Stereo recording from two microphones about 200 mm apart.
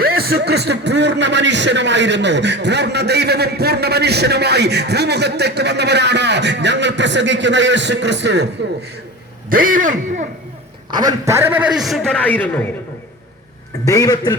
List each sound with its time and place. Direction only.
0.0 s speech: 50° right (ahead or behind)
9.5 s speech: 45° right (ahead or behind)
10.9 s a man's voice: 15° right (ahead or behind); by 12.5 s 10° left (ahead or behind)
13.8 s a man's voice: 15° left (ahead or behind)